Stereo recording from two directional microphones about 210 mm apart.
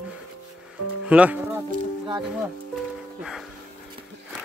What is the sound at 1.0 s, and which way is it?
Music, 5° right (ahead or behind).